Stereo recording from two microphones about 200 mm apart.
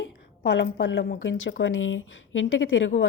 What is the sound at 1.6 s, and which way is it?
Speech, 75° left (ahead or behind).